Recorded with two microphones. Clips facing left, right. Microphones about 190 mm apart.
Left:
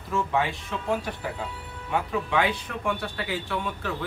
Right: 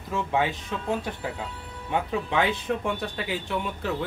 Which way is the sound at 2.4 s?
20° right (ahead or behind).